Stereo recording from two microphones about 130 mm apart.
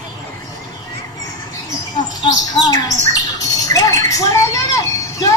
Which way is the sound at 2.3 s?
30° left (ahead or behind).